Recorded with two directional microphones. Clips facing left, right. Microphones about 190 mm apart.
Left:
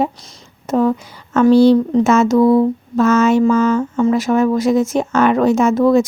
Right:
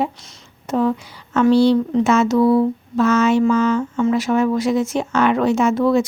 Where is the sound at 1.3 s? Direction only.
45° left (ahead or behind).